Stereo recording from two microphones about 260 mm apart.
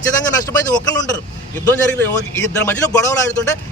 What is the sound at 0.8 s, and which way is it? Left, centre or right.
Speech, centre.